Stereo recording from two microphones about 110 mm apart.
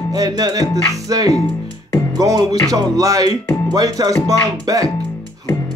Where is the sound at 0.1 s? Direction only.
35° right (ahead or behind).